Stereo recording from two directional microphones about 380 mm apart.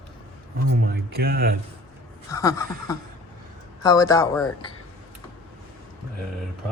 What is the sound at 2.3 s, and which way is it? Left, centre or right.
Speech, centre.